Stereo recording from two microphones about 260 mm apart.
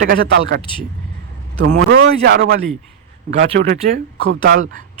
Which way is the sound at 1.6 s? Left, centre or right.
Right.